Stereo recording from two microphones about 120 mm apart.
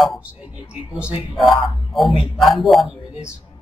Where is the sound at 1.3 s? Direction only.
Centre (ahead or behind).